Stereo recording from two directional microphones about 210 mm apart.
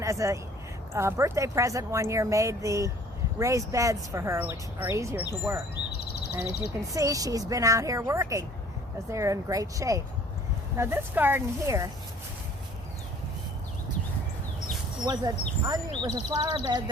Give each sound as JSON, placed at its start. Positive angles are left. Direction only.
{"t": 0.0, "sound": "speech", "side_deg": -15}
{"t": 5.7, "sound": "a sound", "side_deg": 50}
{"t": 6.9, "sound": "speech", "side_deg": -15}
{"t": 15.0, "sound": "speech", "side_deg": -20}